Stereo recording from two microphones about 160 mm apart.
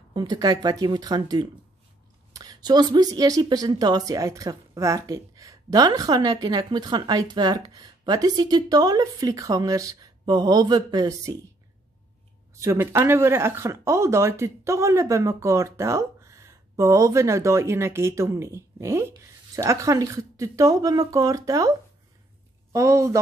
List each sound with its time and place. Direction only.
0.1 s speech: 25° right (ahead or behind)
12.5 s speech: 15° right (ahead or behind)